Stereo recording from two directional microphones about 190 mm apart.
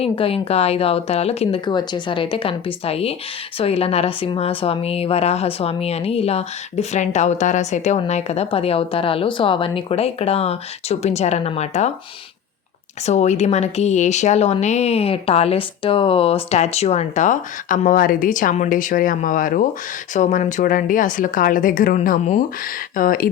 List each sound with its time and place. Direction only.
0.0 s speech: 30° left (ahead or behind)
13.1 s speech: 35° left (ahead or behind)